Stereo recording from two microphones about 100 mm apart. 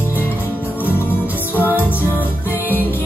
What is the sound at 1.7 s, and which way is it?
Music, 20° left (ahead or behind).